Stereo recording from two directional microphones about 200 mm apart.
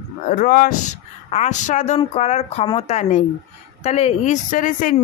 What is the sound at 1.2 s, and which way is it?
Speech, 35° left (ahead or behind).